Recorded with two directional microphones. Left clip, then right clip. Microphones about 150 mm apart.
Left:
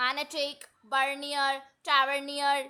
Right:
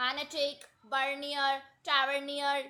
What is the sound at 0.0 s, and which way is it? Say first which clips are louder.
Speech: left 2 dB; 25° left (ahead or behind).